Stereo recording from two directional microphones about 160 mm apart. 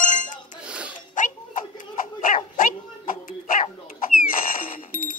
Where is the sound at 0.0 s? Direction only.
55° left (ahead or behind).